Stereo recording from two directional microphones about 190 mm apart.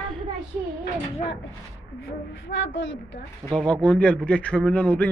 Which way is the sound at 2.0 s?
85° left.